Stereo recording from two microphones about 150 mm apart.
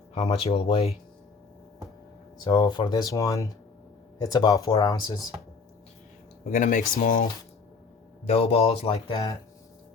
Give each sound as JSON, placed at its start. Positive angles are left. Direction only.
{"t": 0.1, "sound": "speech", "side_deg": 40}
{"t": 2.4, "sound": "speech", "side_deg": 25}
{"t": 6.4, "sound": "speech", "side_deg": 60}
{"t": 8.3, "sound": "speech", "side_deg": 45}